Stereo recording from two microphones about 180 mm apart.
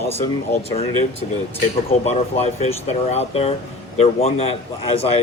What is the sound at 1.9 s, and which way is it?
A man's voice, 35° left (ahead or behind).